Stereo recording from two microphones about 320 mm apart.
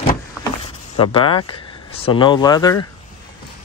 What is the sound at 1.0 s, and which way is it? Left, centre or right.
Speech, centre.